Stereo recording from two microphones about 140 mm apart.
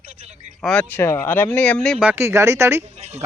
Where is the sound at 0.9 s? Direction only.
15° left (ahead or behind).